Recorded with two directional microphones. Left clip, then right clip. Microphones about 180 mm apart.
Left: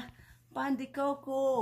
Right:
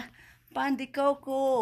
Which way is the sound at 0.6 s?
35° right (ahead or behind).